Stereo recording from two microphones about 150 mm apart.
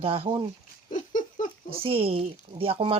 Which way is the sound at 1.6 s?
40° right (ahead or behind).